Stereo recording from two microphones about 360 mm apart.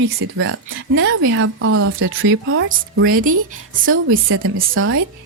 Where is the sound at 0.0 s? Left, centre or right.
Right.